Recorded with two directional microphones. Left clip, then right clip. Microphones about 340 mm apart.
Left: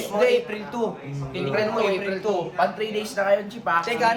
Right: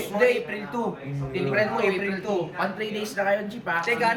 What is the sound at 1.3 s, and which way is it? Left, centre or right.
Speech, centre.